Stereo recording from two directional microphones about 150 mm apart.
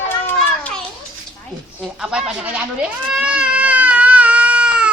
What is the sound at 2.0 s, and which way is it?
Speech, 5° right (ahead or behind).